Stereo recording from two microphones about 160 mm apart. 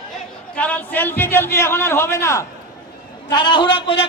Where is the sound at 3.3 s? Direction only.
30° left (ahead or behind).